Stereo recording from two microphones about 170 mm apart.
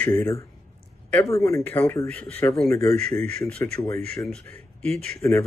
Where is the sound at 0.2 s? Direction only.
15° left (ahead or behind).